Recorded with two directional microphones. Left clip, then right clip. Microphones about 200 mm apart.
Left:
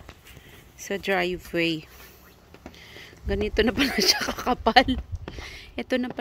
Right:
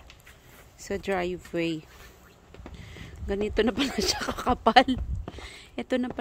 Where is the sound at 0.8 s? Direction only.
5° right (ahead or behind).